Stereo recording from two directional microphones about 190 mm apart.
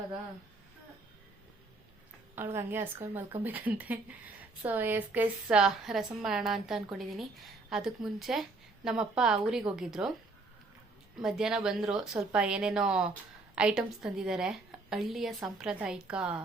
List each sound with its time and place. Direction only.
2.3 s a woman's voice: 10° right (ahead or behind)
11.2 s a woman's voice: 5° right (ahead or behind)